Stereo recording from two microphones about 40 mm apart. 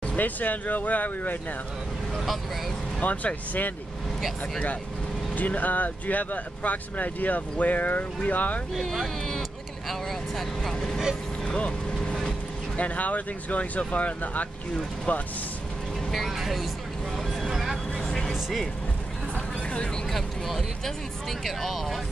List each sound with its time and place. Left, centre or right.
0.1 s speech: left
3.0 s speech: left
5.3 s speech: left
8.8 s speech: centre
11.4 s vehicle: left
12.7 s speech: left
16.1 s speech: centre
17.6 s vehicle: centre
18.0 s music: centre
19.3 s vehicle: left
20.1 s speech: centre